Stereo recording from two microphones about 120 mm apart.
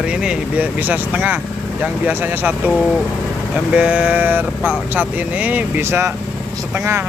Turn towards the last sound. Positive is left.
turn(degrees=-20)  # may be behind; listen again after turning